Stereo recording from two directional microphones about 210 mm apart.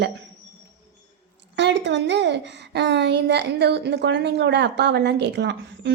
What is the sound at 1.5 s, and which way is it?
A woman's voice, 55° right (ahead or behind).